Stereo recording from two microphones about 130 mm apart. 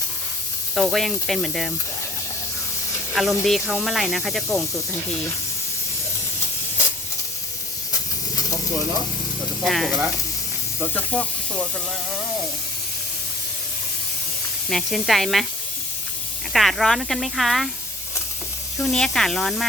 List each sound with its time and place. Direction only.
0.8 s speech: centre (ahead or behind)
3.2 s speech: centre (ahead or behind)
9.6 s speech: centre (ahead or behind)
10.9 s speech: 10° left (ahead or behind)
14.7 s speech: centre (ahead or behind)
16.5 s speech: centre (ahead or behind)
18.8 s speech: centre (ahead or behind)